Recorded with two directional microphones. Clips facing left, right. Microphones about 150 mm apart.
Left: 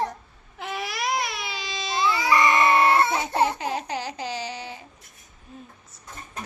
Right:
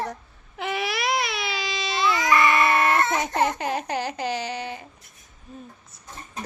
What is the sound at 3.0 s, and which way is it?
Baby cry, 10° left (ahead or behind).